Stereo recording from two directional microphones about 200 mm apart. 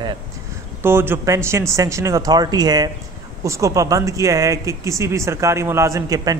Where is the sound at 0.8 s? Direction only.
10° right (ahead or behind).